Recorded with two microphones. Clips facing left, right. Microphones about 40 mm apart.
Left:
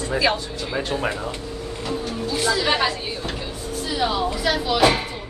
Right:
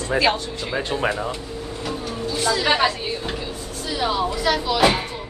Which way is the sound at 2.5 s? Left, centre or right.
Centre.